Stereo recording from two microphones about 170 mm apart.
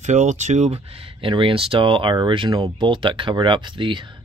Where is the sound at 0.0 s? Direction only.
45° right (ahead or behind).